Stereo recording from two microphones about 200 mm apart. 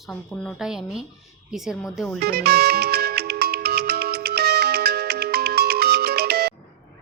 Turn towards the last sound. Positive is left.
turn(degrees=-50)  # may be behind; listen again after turning